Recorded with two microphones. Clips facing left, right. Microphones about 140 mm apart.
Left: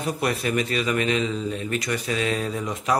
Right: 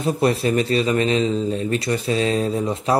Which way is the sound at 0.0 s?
30° right (ahead or behind).